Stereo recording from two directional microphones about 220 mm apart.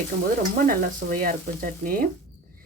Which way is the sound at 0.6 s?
40° right (ahead or behind).